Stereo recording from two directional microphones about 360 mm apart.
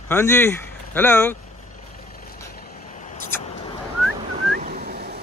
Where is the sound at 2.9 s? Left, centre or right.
Centre.